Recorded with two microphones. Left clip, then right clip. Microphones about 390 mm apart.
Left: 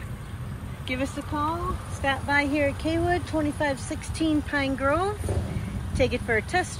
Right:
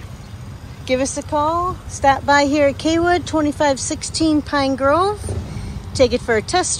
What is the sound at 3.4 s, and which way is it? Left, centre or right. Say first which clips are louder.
Speech: right 10 dB; right.